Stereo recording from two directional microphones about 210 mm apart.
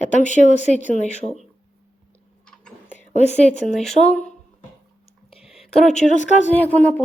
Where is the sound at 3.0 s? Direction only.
35° left (ahead or behind).